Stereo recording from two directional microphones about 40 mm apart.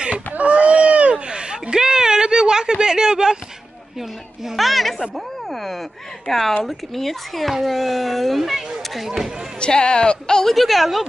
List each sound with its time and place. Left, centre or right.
0.3 s a sound: right; by 3.3 s centre
4.6 s speech: centre
9.6 s speech: left
10.5 s speech: centre